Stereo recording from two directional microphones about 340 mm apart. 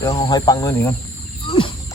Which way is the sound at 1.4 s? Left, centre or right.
Centre.